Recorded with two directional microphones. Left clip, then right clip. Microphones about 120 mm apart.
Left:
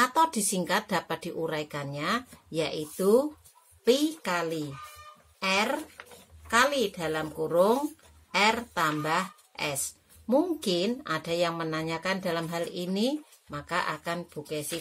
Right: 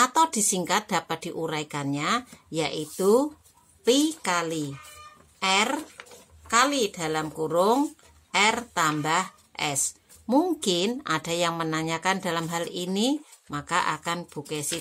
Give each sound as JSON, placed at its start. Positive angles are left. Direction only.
{"t": 0.0, "sound": "a woman's voice", "side_deg": -35}